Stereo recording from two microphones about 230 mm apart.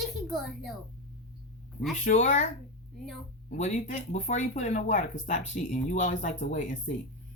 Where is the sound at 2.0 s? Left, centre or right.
Left.